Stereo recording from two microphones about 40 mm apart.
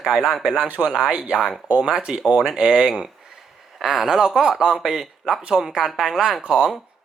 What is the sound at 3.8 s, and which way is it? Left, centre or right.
Speech, centre.